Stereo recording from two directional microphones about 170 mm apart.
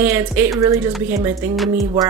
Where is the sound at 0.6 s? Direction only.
20° right (ahead or behind).